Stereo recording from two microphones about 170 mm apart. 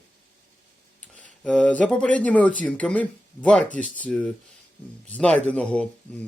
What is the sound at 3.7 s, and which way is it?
Speech, 50° left (ahead or behind).